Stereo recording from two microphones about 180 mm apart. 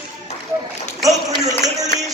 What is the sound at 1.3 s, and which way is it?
Speech, 20° right (ahead or behind).